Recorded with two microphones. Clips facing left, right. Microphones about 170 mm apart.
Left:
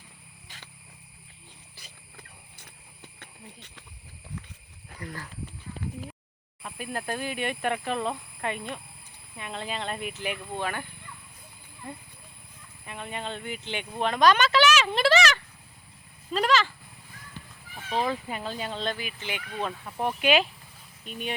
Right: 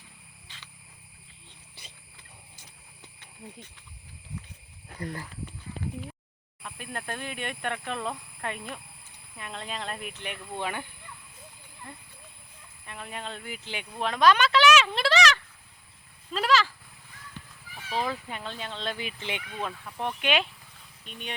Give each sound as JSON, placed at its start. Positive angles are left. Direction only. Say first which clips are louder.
{"t": 0.4, "sound": "a sound", "louder": "left 2 dB", "side_deg": 45}
{"t": 3.2, "sound": "speech", "louder": "right 5 dB", "side_deg": 75}
{"t": 4.9, "sound": "speech", "louder": "right 3 dB", "side_deg": -35}
{"t": 6.6, "sound": "speech", "louder": "left 4 dB", "side_deg": 5}
{"t": 10.6, "sound": "speech", "louder": "right 1 dB", "side_deg": -15}
{"t": 12.8, "sound": "speech", "louder": "left 3 dB", "side_deg": 0}
{"t": 16.3, "sound": "goat", "louder": "left 1 dB", "side_deg": 0}
{"t": 17.9, "sound": "speech", "louder": "left 3 dB", "side_deg": 5}
{"t": 18.9, "sound": "speech", "louder": "right 1 dB", "side_deg": -25}
{"t": 20.0, "sound": "speech", "louder": "left 4 dB", "side_deg": 5}